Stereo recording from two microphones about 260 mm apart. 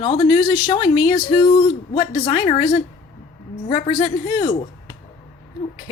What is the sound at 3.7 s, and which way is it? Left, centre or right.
Speech, left.